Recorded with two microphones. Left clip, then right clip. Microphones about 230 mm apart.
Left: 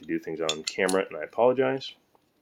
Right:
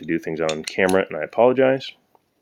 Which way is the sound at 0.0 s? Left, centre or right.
Right.